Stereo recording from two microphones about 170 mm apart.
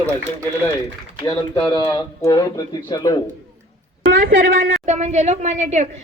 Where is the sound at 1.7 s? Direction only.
15° left (ahead or behind).